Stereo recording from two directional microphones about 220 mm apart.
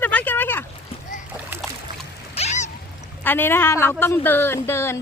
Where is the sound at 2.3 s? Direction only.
30° left (ahead or behind).